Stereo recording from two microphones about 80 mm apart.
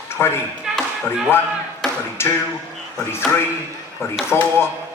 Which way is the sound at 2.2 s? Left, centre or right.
Left.